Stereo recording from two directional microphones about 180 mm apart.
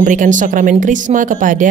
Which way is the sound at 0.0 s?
45° right (ahead or behind).